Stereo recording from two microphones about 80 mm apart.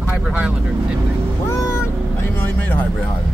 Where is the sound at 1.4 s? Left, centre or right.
Left.